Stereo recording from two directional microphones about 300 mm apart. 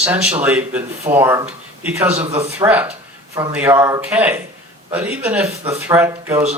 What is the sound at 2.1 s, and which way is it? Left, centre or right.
Speech, right.